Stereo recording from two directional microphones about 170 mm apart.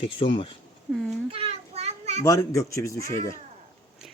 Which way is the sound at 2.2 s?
20° left (ahead or behind).